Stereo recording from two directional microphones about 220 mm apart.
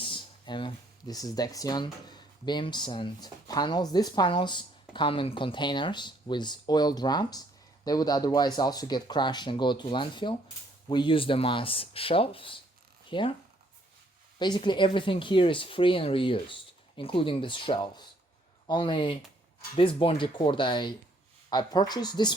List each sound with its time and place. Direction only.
0.0 s speech: 20° left (ahead or behind)
14.3 s speech: 20° left (ahead or behind)